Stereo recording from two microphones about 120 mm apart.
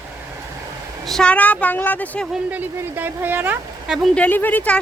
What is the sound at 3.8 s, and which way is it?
Speech, 5° right (ahead or behind).